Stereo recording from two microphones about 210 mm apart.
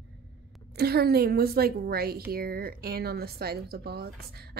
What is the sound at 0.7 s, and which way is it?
A woman's voice, 50° right (ahead or behind).